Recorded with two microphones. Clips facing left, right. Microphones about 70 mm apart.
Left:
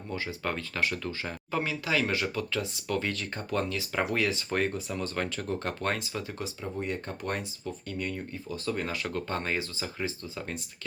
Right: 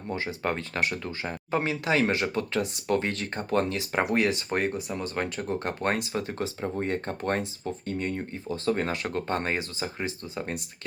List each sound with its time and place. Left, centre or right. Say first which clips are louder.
0.1 s speech: right 4 dB; right